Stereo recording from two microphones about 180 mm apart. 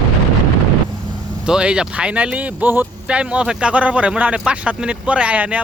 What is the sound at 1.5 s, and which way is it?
Speech, 5° right (ahead or behind).